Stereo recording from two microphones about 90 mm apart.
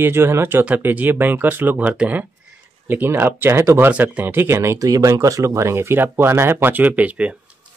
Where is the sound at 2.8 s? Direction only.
25° right (ahead or behind).